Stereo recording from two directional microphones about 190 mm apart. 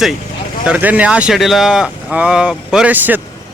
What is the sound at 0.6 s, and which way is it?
A man's voice, 10° right (ahead or behind).